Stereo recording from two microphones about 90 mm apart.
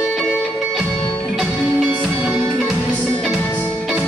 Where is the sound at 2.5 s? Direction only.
Centre (ahead or behind).